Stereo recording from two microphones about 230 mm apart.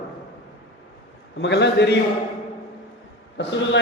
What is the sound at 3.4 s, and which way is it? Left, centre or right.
Speech, left.